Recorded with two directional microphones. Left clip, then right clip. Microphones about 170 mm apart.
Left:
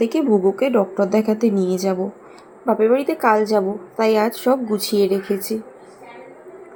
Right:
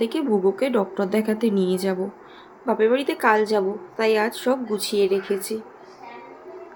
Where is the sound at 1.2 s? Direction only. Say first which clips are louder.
Left 4 dB; 10° right (ahead or behind).